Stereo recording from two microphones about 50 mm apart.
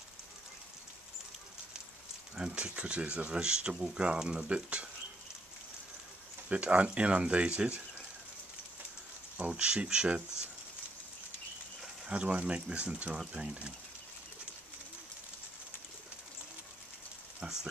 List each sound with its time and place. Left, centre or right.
2.3 s speech: centre
6.5 s speech: right
9.4 s speech: centre
12.1 s speech: right